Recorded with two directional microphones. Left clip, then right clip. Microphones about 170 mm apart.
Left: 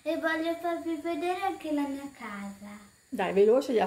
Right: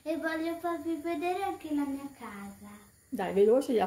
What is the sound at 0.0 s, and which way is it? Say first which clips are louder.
A child's voice: left 4 dB; 35° left (ahead or behind).